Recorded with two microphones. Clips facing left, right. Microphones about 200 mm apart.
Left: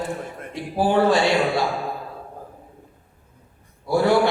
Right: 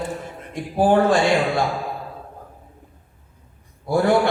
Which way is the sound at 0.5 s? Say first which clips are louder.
Right 3 dB; 50° right (ahead or behind).